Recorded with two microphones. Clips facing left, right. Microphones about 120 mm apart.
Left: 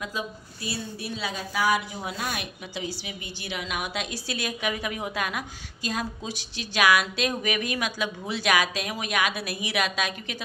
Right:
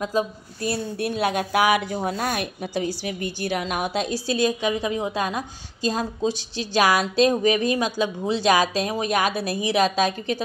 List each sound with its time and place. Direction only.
0.7 s speech: 55° right (ahead or behind)
2.0 s speech: 45° right (ahead or behind)